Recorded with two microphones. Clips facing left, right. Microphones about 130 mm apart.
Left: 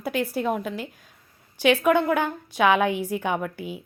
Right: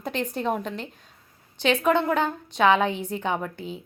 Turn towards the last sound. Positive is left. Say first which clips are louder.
# left 1 dB
turn(degrees=10)  # may be behind; listen again after turning